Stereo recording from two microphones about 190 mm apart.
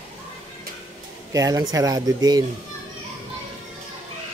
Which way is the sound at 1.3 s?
20° right (ahead or behind).